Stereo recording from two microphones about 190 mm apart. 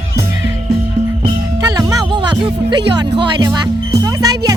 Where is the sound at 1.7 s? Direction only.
20° right (ahead or behind).